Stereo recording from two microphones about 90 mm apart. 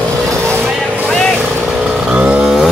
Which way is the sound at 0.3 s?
25° right (ahead or behind).